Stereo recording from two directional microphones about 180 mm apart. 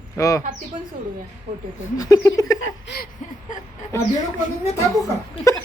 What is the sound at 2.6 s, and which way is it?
Speech, 70° left (ahead or behind).